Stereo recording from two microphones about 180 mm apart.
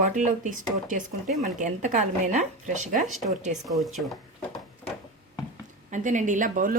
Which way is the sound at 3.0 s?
Centre (ahead or behind).